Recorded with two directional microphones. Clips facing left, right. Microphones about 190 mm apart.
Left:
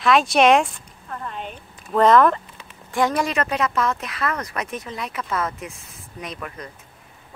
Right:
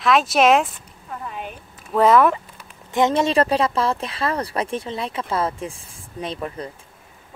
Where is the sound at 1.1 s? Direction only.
5° right (ahead or behind).